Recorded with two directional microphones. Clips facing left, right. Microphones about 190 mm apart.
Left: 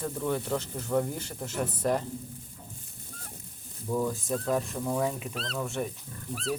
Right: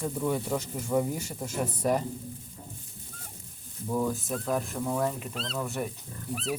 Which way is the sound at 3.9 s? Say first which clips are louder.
Even; centre (ahead or behind).